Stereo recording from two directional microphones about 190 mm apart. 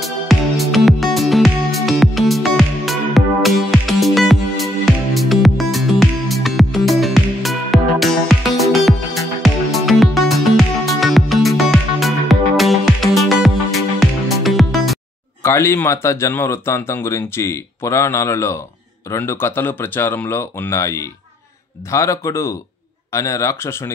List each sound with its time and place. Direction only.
0.0 s music: centre (ahead or behind)
15.4 s speech: 15° left (ahead or behind)